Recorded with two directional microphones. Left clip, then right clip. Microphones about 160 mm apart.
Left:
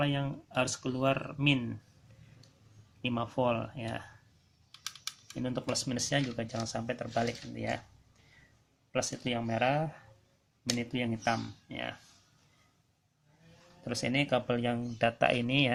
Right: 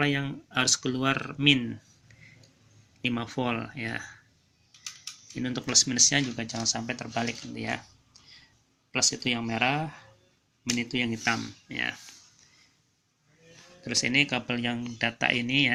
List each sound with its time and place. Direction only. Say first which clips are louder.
0.0 s speech: right 5 dB; centre (ahead or behind)
3.0 s speech: right 1 dB; 10° left (ahead or behind)
5.4 s speech: right 9 dB; 5° left (ahead or behind)
8.9 s speech: right 6 dB; 10° left (ahead or behind)
13.8 s speech: right 7 dB; 20° left (ahead or behind)